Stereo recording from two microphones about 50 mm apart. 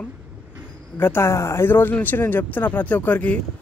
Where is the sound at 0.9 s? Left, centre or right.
Left.